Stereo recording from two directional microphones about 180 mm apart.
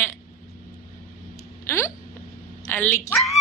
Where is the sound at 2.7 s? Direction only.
10° left (ahead or behind).